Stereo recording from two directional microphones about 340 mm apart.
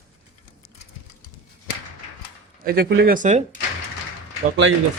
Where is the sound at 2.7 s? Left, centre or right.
Right.